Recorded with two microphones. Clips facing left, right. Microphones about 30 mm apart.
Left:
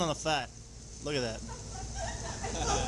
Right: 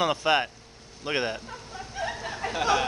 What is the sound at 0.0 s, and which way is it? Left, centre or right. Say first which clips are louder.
Speech: right 8 dB; right.